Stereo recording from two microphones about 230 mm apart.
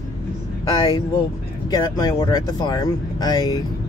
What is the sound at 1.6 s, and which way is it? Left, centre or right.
Speech, centre.